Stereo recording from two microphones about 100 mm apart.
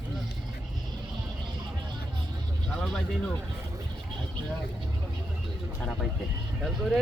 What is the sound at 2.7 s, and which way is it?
Speech, 5° left (ahead or behind).